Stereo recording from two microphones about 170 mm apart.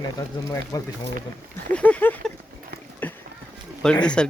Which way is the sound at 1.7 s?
10° left (ahead or behind).